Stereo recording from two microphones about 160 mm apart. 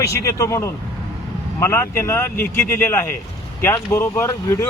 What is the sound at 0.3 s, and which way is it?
Speech, 20° left (ahead or behind).